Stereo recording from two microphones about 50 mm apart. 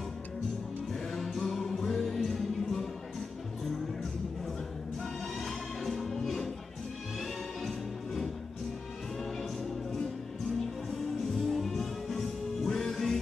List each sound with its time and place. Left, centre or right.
1.1 s music: centre
5.4 s music: centre
7.6 s music: centre
10.9 s music: centre